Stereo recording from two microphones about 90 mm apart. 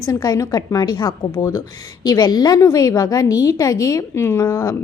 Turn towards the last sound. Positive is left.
turn(degrees=35)  # may be behind; listen again after turning